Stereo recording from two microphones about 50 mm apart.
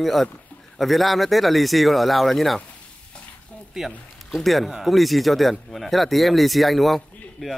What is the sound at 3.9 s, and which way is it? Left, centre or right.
A man's voice, centre.